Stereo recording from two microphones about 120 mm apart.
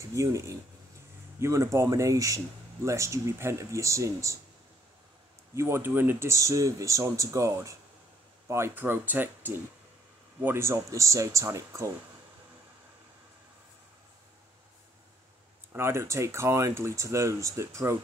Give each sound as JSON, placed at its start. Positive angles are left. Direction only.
{"t": 0.1, "sound": "speech", "side_deg": -25}
{"t": 5.5, "sound": "speech", "side_deg": -20}
{"t": 15.7, "sound": "speech", "side_deg": -20}